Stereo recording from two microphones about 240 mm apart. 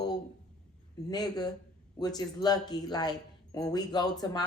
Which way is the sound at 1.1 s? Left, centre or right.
Centre.